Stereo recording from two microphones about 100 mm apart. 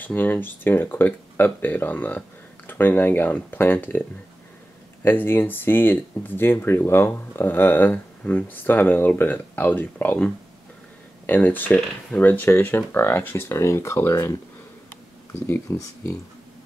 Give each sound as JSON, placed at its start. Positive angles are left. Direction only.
{"t": 0.0, "sound": "speech", "side_deg": 20}
{"t": 5.0, "sound": "speech", "side_deg": 25}
{"t": 11.2, "sound": "speech", "side_deg": 20}
{"t": 15.4, "sound": "speech", "side_deg": 20}